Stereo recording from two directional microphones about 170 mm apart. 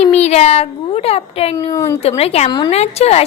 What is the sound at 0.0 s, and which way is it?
Speech, 40° left (ahead or behind).